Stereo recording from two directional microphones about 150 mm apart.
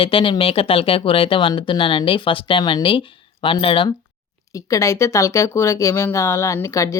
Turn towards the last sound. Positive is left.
turn(degrees=20)  # may be behind; listen again after turning